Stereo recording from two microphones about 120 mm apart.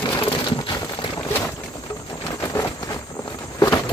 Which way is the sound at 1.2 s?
20° left (ahead or behind).